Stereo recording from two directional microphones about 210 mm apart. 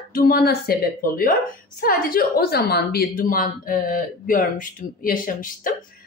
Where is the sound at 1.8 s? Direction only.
45° left (ahead or behind).